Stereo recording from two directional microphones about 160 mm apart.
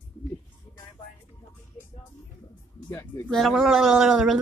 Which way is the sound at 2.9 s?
15° left (ahead or behind).